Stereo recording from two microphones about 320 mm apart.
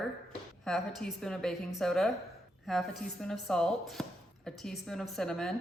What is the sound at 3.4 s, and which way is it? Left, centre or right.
Speech, centre.